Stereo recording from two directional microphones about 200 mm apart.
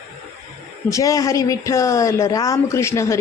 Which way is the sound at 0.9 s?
15° left (ahead or behind).